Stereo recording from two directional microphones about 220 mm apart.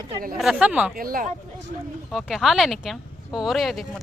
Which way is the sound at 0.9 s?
40° right (ahead or behind).